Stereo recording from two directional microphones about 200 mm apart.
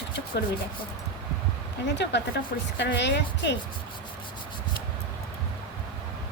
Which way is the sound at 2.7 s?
60° left (ahead or behind).